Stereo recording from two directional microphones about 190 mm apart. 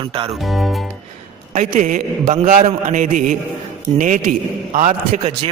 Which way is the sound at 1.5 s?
40° right (ahead or behind).